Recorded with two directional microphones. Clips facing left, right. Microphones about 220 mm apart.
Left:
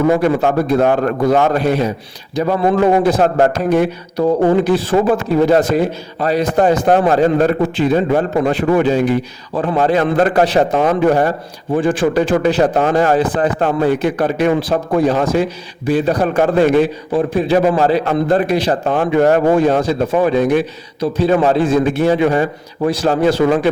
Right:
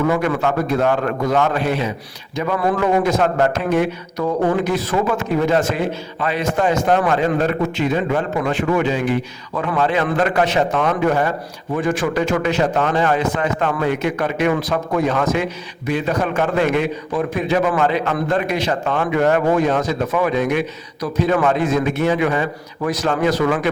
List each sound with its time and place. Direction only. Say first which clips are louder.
0.1 s a man's voice: left 5 dB; 35° left (ahead or behind)